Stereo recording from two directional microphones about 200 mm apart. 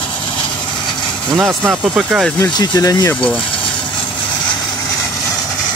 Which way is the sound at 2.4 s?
15° left (ahead or behind).